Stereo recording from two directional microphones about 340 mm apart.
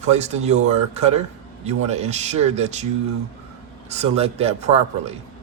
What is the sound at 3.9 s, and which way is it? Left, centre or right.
Speech, centre.